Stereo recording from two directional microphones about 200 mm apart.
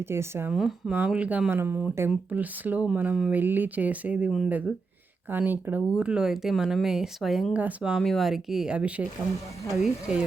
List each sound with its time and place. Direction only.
0.0 s speech: 10° right (ahead or behind)